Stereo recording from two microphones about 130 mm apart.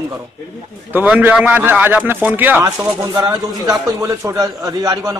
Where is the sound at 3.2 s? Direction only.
25° right (ahead or behind).